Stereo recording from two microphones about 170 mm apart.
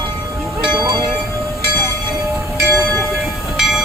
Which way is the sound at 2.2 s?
20° right (ahead or behind).